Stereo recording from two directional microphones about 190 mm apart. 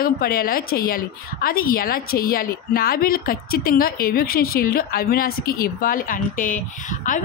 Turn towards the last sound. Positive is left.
turn(degrees=45)  # may be behind; listen again after turning